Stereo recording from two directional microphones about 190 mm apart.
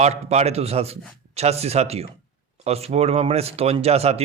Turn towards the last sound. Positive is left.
turn(degrees=-35)  # may be behind; listen again after turning